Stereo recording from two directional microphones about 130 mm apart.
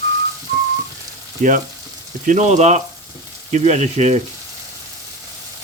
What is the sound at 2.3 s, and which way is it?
Speech, 65° right (ahead or behind).